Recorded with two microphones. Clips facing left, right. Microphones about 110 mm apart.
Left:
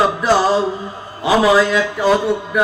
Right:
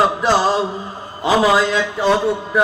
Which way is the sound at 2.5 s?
30° right (ahead or behind).